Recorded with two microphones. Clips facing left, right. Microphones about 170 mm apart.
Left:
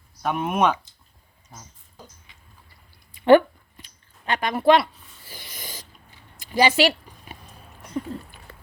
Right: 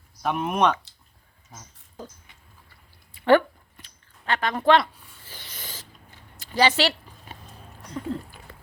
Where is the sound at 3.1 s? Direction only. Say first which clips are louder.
Left 4 dB; 15° left (ahead or behind).